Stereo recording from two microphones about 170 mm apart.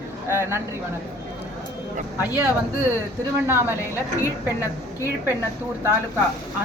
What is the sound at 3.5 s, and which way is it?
Speech, 15° right (ahead or behind).